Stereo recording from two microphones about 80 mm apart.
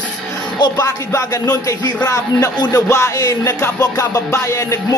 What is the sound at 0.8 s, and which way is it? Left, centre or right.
Speech, left.